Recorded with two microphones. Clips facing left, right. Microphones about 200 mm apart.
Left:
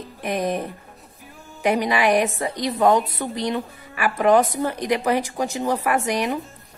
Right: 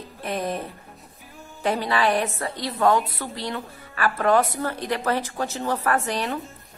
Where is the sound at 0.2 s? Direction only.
15° left (ahead or behind).